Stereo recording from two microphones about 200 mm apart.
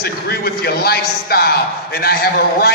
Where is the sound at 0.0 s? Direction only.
50° left (ahead or behind).